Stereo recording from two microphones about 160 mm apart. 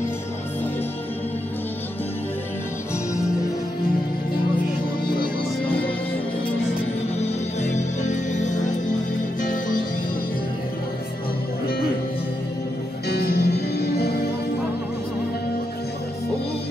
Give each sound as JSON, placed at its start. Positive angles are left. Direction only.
{"t": 7.2, "sound": "music", "side_deg": 50}
{"t": 13.1, "sound": "music", "side_deg": 80}